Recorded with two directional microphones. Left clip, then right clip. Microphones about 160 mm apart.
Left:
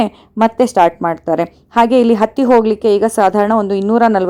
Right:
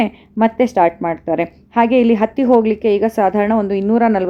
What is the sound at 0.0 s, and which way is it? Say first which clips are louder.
A woman's voice: left 3 dB; 35° left (ahead or behind).